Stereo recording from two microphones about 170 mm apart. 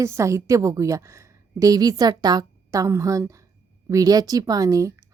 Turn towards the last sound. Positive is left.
turn(degrees=-20)  # may be behind; listen again after turning